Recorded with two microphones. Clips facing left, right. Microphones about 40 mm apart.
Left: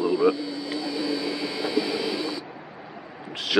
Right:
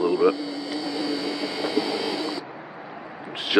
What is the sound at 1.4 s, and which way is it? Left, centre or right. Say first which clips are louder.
Vehicle: right 1 dB; centre.